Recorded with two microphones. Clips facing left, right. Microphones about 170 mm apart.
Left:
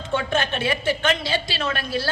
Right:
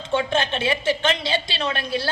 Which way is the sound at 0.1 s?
25° right (ahead or behind).